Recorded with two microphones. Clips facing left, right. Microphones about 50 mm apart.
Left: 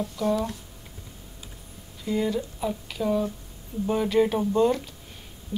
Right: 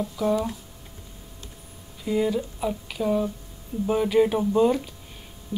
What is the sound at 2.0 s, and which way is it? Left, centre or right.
Speech, centre.